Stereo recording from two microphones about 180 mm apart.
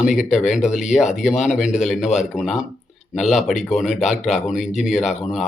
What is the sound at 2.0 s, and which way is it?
Speech, 40° left (ahead or behind).